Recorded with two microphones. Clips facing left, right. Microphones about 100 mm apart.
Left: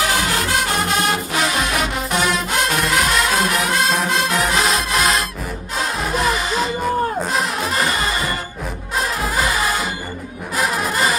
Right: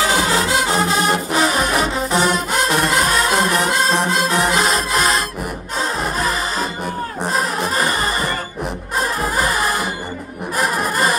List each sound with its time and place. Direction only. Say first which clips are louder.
0.0 s music: right 3 dB; 35° right (ahead or behind)
9.2 s music: right 1 dB; 40° right (ahead or behind)